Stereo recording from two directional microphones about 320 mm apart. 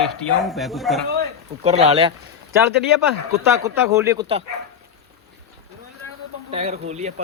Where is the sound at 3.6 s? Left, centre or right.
Centre.